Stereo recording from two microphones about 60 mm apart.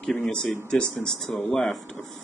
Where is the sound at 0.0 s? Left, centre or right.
Centre.